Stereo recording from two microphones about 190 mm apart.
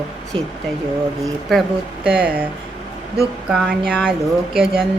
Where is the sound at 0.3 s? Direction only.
30° right (ahead or behind).